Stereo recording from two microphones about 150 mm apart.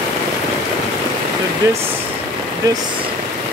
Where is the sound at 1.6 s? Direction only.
20° right (ahead or behind).